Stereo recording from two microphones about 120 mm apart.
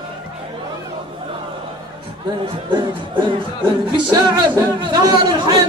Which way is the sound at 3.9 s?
35° right (ahead or behind).